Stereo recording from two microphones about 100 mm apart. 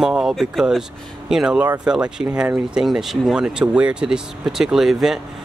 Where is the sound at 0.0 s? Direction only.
5° right (ahead or behind).